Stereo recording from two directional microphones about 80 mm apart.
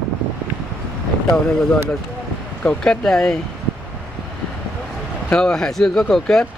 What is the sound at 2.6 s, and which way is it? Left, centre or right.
Speech, centre.